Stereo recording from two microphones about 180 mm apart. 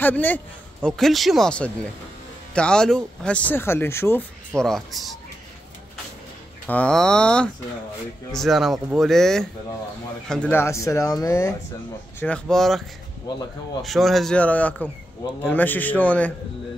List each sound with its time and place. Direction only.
0.0 s speech: 10° left (ahead or behind)
4.6 s speech: centre (ahead or behind)
6.7 s speech: 5° left (ahead or behind)
12.2 s speech: 5° left (ahead or behind)
13.8 s speech: centre (ahead or behind)